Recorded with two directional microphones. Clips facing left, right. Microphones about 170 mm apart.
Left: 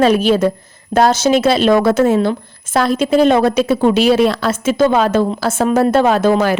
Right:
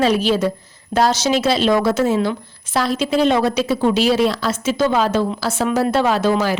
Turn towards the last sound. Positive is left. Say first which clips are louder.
# left 4 dB
turn(degrees=50)  # may be behind; listen again after turning